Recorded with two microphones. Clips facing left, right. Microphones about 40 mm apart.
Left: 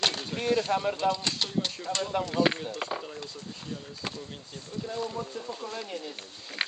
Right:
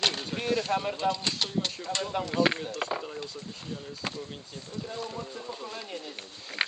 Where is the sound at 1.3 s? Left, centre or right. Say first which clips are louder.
Even; centre.